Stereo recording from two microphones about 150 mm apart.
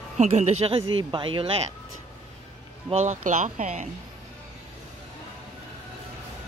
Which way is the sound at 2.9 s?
55° right (ahead or behind).